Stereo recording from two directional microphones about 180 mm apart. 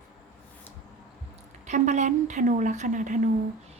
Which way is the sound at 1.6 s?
40° right (ahead or behind).